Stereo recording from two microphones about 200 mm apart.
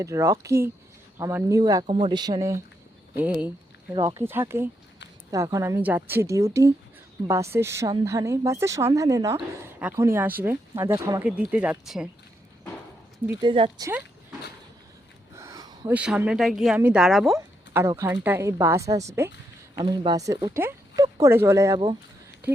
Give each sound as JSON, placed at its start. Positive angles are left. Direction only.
{"t": 0.0, "sound": "speech", "side_deg": -15}
{"t": 3.2, "sound": "speech", "side_deg": -5}
{"t": 3.9, "sound": "speech", "side_deg": -20}
{"t": 13.4, "sound": "speech", "side_deg": -25}
{"t": 15.4, "sound": "a sound", "side_deg": -15}
{"t": 15.9, "sound": "speech", "side_deg": -5}
{"t": 17.3, "sound": "speech", "side_deg": -15}